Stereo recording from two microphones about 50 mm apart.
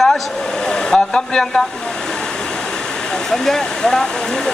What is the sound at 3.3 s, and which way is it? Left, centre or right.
Speech, centre.